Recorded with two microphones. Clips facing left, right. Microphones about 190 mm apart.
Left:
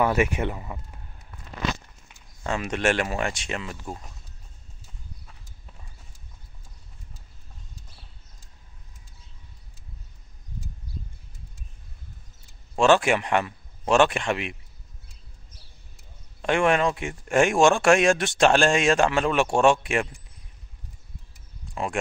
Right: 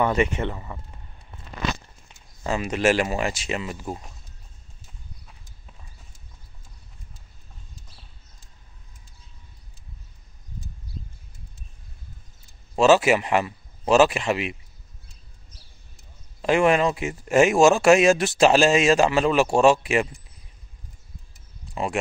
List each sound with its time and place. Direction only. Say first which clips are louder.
0.0 s speech: even; 5° left (ahead or behind)
1.3 s a sound: right 2 dB; 25° right (ahead or behind)
2.4 s speech: right 3 dB; 5° right (ahead or behind)
12.7 s speech: right 2 dB; 5° right (ahead or behind)
16.3 s speech: right 3 dB; 5° right (ahead or behind)